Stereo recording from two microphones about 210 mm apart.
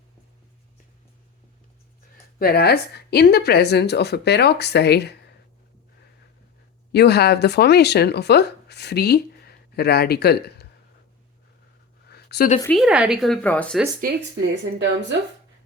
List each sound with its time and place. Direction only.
2.4 s speech: 50° left (ahead or behind)
6.9 s speech: 50° left (ahead or behind)
12.0 s a sound: 50° left (ahead or behind)
12.6 s speech: centre (ahead or behind)
14.0 s speech: 55° right (ahead or behind)